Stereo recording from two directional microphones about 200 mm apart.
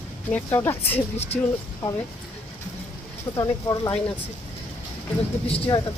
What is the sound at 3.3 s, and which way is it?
Speech, 25° left (ahead or behind).